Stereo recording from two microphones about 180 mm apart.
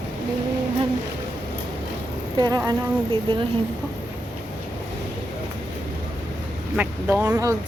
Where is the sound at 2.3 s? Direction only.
20° right (ahead or behind).